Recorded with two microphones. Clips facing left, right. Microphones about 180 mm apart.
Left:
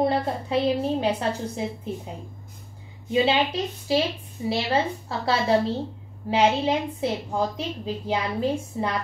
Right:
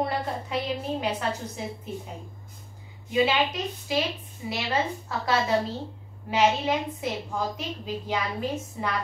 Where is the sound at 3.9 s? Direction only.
30° left (ahead or behind).